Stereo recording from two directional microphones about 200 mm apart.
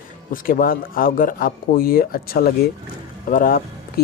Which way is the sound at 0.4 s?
45° left (ahead or behind).